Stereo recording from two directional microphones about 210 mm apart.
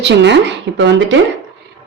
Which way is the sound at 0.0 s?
55° right (ahead or behind).